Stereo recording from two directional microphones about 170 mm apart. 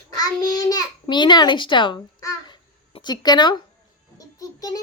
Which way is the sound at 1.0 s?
25° left (ahead or behind).